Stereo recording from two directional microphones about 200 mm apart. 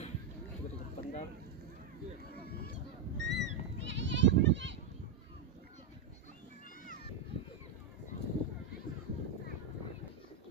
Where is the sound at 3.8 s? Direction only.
65° right (ahead or behind).